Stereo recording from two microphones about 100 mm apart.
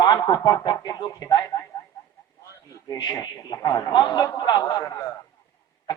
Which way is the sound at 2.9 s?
40° left (ahead or behind).